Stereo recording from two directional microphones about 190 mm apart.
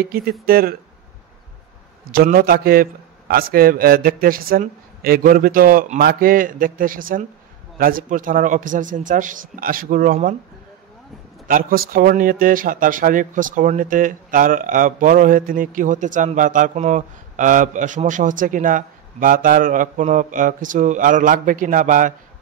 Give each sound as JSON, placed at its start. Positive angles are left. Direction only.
{"t": 0.0, "sound": "speech", "side_deg": -50}
{"t": 2.0, "sound": "speech", "side_deg": -50}
{"t": 11.4, "sound": "speech", "side_deg": -45}